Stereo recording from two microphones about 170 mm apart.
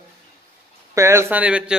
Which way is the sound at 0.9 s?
15° right (ahead or behind).